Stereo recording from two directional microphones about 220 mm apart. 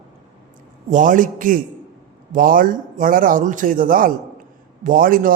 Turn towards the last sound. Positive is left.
turn(degrees=-40)  # may be behind; listen again after turning